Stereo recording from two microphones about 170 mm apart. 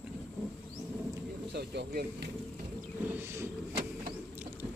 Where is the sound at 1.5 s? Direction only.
75° right (ahead or behind).